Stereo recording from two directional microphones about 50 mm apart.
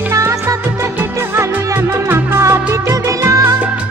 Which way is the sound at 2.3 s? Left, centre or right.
Right.